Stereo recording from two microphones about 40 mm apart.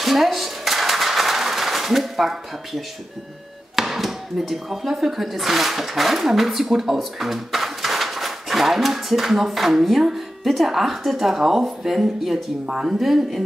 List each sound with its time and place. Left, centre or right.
0.0 s a sound: centre
3.7 s speech: centre
12.6 s speech: centre
13.0 s speech: centre